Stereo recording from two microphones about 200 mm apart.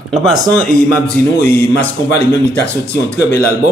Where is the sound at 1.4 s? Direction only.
10° left (ahead or behind).